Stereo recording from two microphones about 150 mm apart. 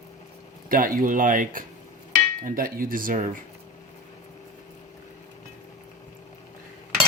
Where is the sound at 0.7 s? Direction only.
65° right (ahead or behind).